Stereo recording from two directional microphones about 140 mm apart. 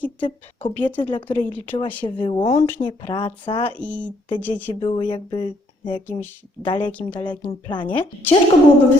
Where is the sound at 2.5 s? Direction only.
15° left (ahead or behind).